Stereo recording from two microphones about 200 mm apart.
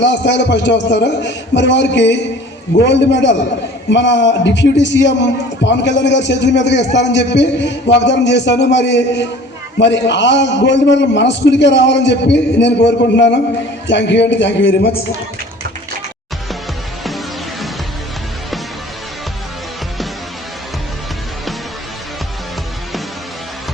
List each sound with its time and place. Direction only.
0.0 s a man's voice: 60° left (ahead or behind)